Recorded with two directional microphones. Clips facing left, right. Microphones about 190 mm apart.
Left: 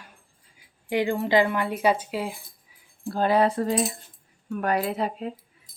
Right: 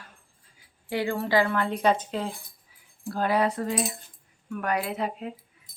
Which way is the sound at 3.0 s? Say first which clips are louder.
Left 3 dB; 25° left (ahead or behind).